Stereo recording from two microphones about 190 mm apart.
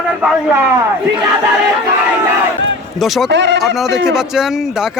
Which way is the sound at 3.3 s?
70° right (ahead or behind).